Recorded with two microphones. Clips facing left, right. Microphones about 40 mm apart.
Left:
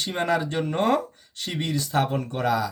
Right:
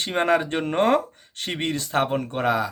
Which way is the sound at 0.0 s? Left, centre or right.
Right.